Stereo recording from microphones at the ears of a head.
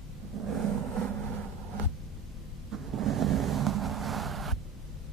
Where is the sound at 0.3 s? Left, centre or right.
Right.